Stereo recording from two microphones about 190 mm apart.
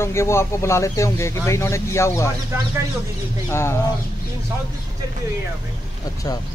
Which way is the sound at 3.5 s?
15° left (ahead or behind).